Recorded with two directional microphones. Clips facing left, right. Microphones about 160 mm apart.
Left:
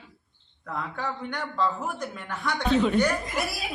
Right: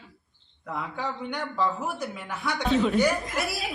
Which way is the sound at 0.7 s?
10° right (ahead or behind).